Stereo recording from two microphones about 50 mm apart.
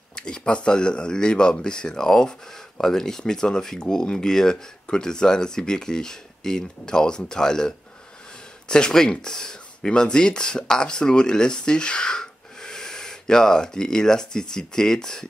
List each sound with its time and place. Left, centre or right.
0.1 s speech: centre